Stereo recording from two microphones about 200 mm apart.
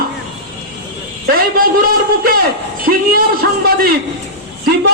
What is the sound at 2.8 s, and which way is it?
A man's voice, 45° right (ahead or behind).